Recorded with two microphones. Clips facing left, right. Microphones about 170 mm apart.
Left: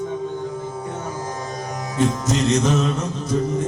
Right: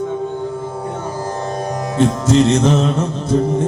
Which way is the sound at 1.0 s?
30° right (ahead or behind).